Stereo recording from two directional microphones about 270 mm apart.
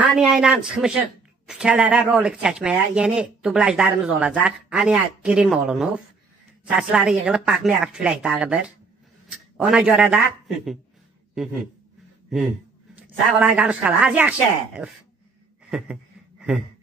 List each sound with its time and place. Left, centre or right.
0.0 s a man's voice: centre
12.9 s speech: centre
15.7 s a sound: centre